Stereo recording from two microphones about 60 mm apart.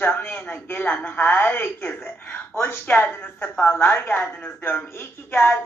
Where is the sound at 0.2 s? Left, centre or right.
Left.